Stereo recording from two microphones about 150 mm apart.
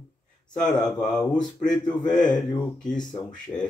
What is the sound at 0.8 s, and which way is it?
Speech, 5° left (ahead or behind).